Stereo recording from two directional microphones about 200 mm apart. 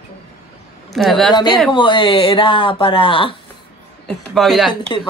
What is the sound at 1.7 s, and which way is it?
Speech, 25° left (ahead or behind).